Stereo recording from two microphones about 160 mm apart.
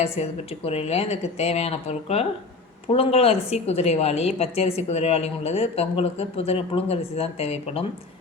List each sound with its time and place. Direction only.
0.0 s a woman's voice: 40° left (ahead or behind)